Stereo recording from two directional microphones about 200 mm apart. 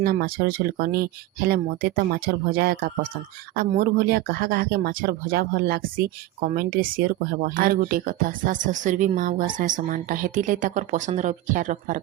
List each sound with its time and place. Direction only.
0.0 s speech: 50° right (ahead or behind)